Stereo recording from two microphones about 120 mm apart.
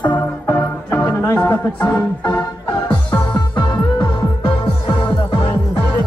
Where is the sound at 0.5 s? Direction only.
20° left (ahead or behind).